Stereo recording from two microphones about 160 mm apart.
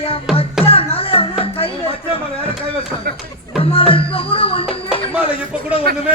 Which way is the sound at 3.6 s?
35° left (ahead or behind).